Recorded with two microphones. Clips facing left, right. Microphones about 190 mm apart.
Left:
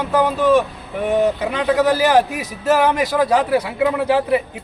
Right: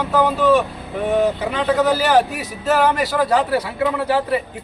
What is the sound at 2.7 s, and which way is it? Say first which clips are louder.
Speech: even; 15° left (ahead or behind).